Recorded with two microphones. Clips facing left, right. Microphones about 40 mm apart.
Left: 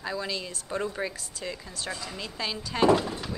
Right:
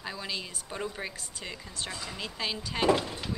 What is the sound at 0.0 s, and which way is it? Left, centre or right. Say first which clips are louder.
Speech: left 4 dB; centre.